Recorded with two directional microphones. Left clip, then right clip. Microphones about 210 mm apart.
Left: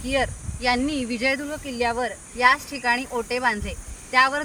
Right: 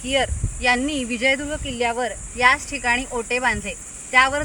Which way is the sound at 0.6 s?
Centre (ahead or behind).